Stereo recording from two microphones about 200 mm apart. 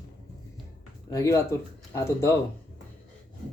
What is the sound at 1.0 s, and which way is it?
Speech, 15° left (ahead or behind).